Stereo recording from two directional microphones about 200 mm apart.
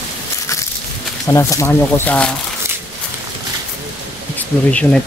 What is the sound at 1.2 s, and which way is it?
Speech, 15° left (ahead or behind).